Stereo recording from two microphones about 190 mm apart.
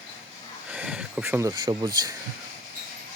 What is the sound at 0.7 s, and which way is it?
Speech, 5° right (ahead or behind).